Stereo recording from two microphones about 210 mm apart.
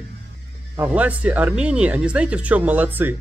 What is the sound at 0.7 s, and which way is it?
Speech, 5° right (ahead or behind).